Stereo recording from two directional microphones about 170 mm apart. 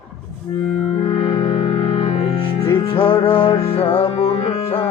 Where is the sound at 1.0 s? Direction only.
30° left (ahead or behind).